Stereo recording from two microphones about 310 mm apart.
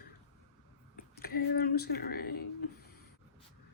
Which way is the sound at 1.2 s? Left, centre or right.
Left.